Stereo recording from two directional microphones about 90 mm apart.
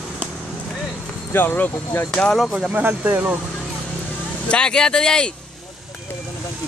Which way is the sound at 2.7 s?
20° right (ahead or behind).